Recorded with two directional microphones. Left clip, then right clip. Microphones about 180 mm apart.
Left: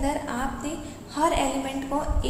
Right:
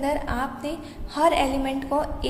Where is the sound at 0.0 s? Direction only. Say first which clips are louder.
Right 2 dB; 40° right (ahead or behind).